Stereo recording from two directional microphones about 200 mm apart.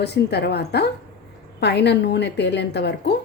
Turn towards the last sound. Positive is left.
turn(degrees=55)  # may be behind; listen again after turning